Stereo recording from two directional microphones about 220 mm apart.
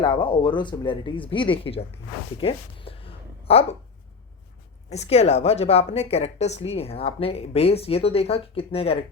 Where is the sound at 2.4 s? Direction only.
25° left (ahead or behind).